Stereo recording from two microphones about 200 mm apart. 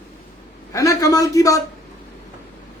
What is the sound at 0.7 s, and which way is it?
Speech, 15° left (ahead or behind).